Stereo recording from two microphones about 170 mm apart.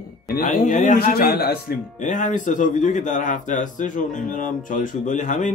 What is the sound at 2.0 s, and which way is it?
A man's voice, 50° left (ahead or behind).